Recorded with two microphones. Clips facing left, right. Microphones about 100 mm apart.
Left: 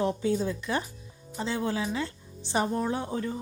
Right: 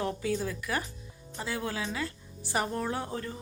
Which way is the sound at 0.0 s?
25° left (ahead or behind).